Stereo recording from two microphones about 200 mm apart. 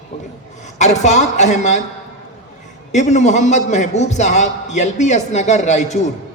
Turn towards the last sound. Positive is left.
turn(degrees=35)  # may be behind; listen again after turning